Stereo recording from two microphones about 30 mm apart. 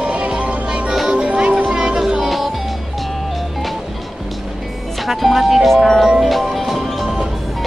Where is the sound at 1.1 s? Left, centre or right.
Right.